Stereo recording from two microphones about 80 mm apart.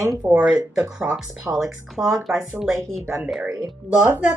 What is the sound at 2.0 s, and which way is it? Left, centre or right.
Speech, centre.